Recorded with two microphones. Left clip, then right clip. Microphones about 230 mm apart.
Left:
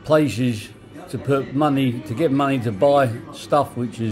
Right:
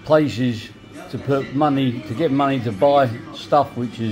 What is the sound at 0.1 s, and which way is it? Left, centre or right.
Speech, centre.